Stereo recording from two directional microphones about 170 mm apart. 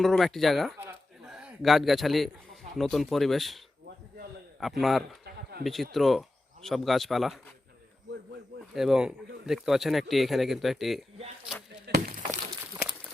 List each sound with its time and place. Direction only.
0.0 s a man's voice: centre (ahead or behind)
4.6 s speech: centre (ahead or behind)
5.2 s a sound: 70° right (ahead or behind)
5.6 s speech: centre (ahead or behind)
8.7 s speech: centre (ahead or behind)
11.9 s breaking: 60° right (ahead or behind)